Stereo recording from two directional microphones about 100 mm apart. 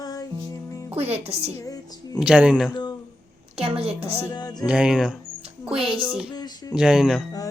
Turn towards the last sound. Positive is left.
turn(degrees=-5)  # may be behind; listen again after turning